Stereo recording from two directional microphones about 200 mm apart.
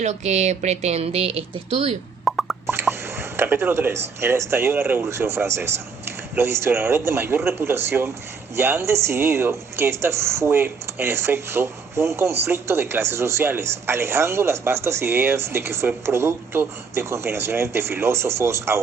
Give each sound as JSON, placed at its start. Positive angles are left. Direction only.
{"t": 0.0, "sound": "speech", "side_deg": -35}
{"t": 2.2, "sound": "plop", "side_deg": 0}
{"t": 2.7, "sound": "drip", "side_deg": -10}
{"t": 4.2, "sound": "speech", "side_deg": -10}